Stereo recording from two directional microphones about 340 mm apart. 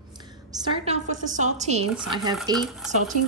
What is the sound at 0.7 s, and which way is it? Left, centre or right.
A woman's voice, centre.